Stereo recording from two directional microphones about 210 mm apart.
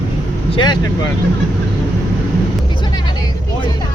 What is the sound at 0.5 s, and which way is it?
Speech, 20° left (ahead or behind).